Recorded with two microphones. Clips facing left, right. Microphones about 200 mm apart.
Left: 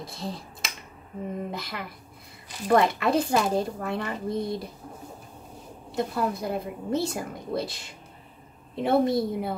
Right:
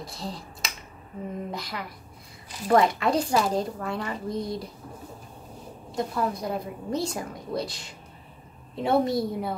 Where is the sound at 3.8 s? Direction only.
55° left (ahead or behind).